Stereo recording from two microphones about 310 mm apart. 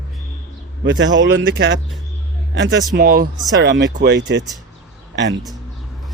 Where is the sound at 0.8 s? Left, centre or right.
Right.